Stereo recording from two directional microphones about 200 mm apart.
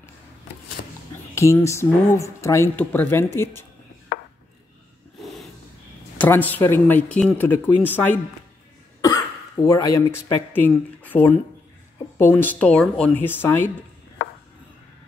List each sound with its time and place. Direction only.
0.8 s a sound: 50° left (ahead or behind)
1.3 s speech: 15° left (ahead or behind)
6.1 s speech: 10° left (ahead or behind)